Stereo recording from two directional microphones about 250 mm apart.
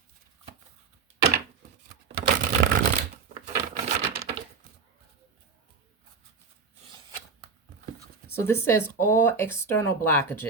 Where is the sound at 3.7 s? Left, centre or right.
Right.